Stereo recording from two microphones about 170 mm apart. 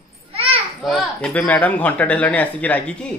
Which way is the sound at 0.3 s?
35° right (ahead or behind).